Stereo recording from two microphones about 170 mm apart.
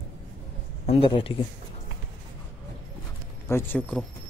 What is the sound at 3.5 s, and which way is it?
Speech, 15° left (ahead or behind).